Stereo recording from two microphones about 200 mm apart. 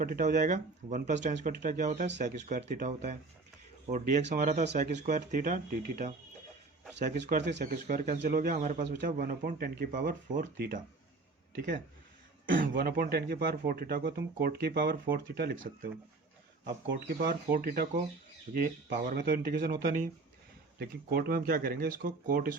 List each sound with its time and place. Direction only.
0.0 s speech: 45° right (ahead or behind)
12.5 s speech: 45° right (ahead or behind)